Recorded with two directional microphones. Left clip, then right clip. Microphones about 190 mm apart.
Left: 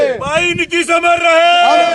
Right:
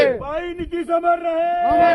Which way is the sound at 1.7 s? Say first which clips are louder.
Left 4 dB; 65° left (ahead or behind).